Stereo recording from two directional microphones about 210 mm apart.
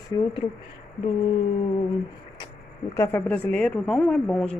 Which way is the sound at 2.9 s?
10° left (ahead or behind).